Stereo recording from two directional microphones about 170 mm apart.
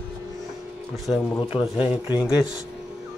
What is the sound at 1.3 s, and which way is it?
Speech, 35° left (ahead or behind).